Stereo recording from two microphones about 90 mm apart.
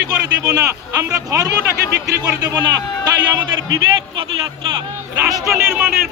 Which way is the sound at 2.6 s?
50° right (ahead or behind).